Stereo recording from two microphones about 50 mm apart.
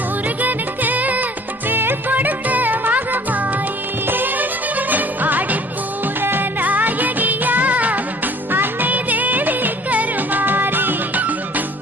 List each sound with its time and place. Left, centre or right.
0.4 s music: right
1.7 s music: right
6.7 s music: right
8.5 s music of bollywood: right